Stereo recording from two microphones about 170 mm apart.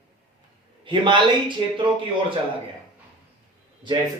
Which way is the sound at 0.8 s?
30° right (ahead or behind).